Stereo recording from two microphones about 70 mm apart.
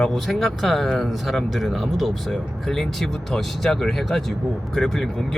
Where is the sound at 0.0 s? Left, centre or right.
Centre.